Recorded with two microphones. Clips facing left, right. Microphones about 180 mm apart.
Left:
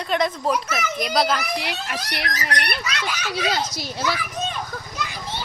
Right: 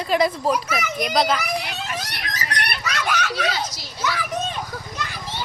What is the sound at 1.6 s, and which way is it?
Speech, 75° left (ahead or behind).